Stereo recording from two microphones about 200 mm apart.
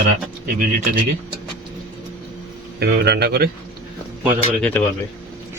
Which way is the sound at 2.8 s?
55° right (ahead or behind).